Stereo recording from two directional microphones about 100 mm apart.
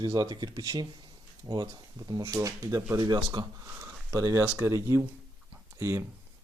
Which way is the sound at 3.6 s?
30° right (ahead or behind).